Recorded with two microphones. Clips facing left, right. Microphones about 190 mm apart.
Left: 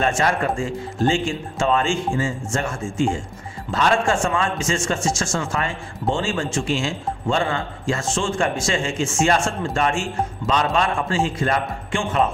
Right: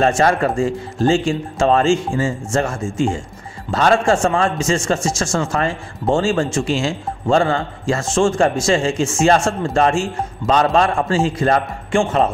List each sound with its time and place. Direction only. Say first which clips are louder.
0.0 s a man's voice: right 5 dB; 40° right (ahead or behind)
3.7 s a man's voice: right 4 dB; 40° right (ahead or behind)